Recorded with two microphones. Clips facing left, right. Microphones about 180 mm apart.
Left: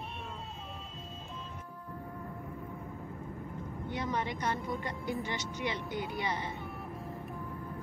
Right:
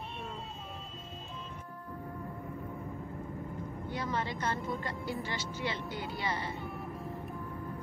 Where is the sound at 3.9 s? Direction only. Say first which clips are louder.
Left 1 dB; 20° left (ahead or behind).